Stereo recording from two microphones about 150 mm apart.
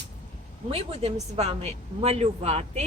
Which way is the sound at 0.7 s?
40° right (ahead or behind).